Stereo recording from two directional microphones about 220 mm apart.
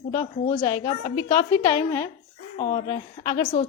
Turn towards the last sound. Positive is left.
turn(degrees=20)  # may be behind; listen again after turning